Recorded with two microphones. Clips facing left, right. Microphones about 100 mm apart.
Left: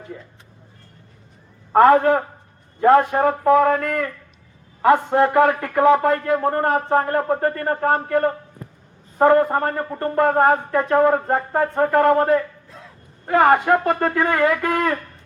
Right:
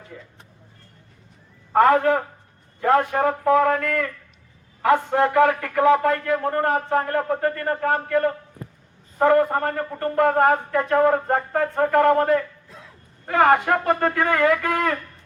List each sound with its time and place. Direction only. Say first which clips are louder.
1.7 s speech: left 3 dB; 30° left (ahead or behind)